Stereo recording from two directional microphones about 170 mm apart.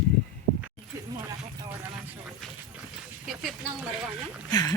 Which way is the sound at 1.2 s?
20° right (ahead or behind).